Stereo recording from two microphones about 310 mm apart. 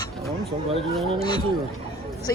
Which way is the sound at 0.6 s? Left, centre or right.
Centre.